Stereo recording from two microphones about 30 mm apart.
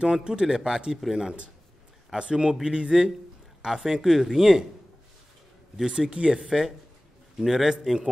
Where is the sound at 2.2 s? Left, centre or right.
Right.